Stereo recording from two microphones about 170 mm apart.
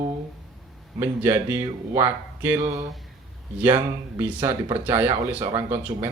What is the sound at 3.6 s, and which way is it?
Speech, 15° right (ahead or behind).